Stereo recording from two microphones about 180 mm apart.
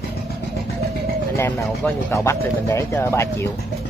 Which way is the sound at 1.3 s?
10° left (ahead or behind).